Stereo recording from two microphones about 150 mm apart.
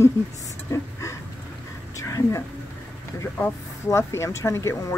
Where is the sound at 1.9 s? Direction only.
20° left (ahead or behind).